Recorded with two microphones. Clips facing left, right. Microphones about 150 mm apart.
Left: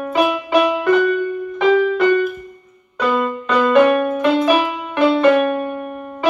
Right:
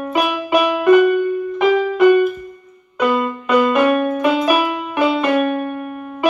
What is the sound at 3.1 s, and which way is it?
Music, 10° right (ahead or behind).